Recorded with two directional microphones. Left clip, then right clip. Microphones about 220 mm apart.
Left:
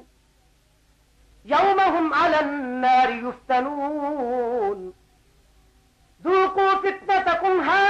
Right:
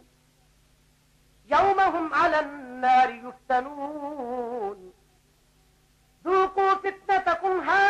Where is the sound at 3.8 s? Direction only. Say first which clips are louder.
Left 7 dB; 20° right (ahead or behind).